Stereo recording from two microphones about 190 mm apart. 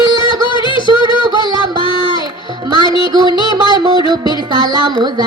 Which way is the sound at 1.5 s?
25° left (ahead or behind).